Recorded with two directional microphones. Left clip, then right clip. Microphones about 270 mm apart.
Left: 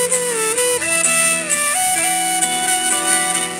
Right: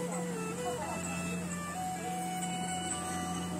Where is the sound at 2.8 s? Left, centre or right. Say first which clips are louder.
Left 18 dB; left.